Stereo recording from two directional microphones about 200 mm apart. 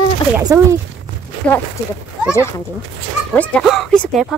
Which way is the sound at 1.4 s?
5° left (ahead or behind).